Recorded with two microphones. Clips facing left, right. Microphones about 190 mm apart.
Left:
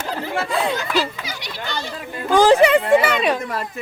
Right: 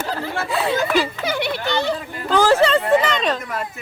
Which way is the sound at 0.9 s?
55° right (ahead or behind).